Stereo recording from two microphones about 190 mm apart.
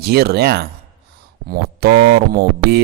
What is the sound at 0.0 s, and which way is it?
Speech, 55° right (ahead or behind).